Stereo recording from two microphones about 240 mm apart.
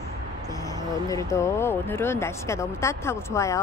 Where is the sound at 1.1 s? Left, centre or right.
Centre.